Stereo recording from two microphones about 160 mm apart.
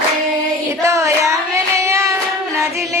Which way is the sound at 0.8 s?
20° right (ahead or behind).